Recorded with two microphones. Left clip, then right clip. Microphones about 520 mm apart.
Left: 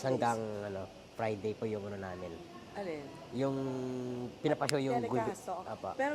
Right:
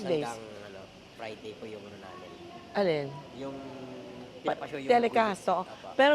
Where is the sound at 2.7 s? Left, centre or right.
Right.